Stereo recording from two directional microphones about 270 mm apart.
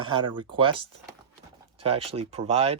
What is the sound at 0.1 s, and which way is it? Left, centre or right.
Speech, centre.